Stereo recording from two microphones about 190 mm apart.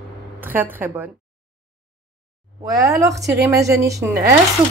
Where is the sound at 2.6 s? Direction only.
15° right (ahead or behind).